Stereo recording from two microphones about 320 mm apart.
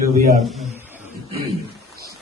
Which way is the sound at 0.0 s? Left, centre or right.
Centre.